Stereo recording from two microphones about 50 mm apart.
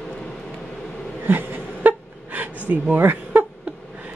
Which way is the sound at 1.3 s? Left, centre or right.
Right.